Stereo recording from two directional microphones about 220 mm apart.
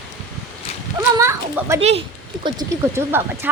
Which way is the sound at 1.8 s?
25° right (ahead or behind).